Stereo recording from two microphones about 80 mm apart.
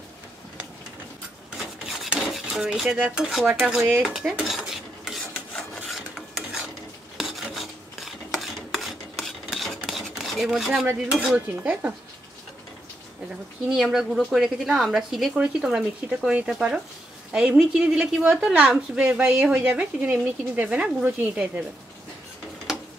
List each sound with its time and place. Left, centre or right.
1.6 s filing: centre
2.6 s a woman's voice: centre
4.0 s cutlery: centre
5.9 s filing: centre
11.3 s stir: centre
13.7 s a woman's voice: centre
22.7 s tick-tock: centre